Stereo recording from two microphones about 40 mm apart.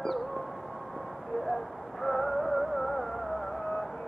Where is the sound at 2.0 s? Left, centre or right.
Centre.